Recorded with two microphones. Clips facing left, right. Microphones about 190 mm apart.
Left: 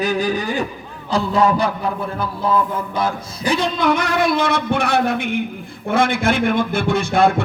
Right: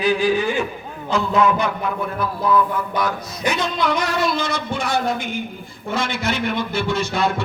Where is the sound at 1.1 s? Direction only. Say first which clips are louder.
Left 1 dB; 35° left (ahead or behind).